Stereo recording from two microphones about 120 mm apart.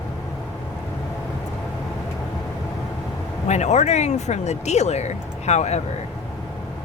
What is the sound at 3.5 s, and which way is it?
Speech, 70° left (ahead or behind).